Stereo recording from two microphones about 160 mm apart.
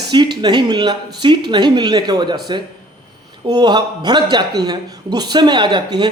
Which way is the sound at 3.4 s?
25° right (ahead or behind).